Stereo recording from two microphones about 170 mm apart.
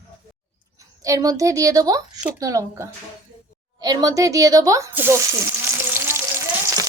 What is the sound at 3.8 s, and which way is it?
Sizzle, 20° right (ahead or behind).